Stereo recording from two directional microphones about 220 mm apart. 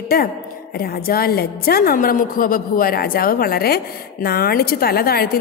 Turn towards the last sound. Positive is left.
turn(degrees=45)  # may be behind; listen again after turning